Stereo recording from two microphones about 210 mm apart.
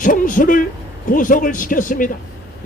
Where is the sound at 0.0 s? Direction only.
40° left (ahead or behind).